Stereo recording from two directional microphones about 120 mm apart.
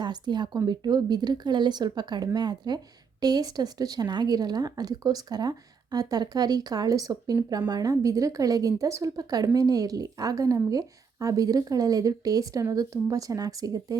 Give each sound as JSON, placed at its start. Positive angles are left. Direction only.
{"t": 0.0, "sound": "a woman's voice", "side_deg": -40}